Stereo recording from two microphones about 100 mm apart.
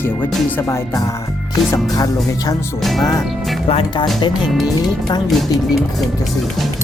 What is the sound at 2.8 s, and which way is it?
Music, centre (ahead or behind).